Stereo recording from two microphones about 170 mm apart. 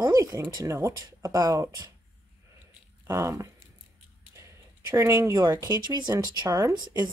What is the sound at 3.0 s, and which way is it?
Speech, 15° right (ahead or behind).